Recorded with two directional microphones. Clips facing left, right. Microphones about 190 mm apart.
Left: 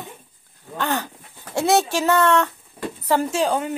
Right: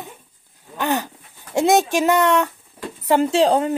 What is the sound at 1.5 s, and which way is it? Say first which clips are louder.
Speech: right 3 dB; 15° right (ahead or behind).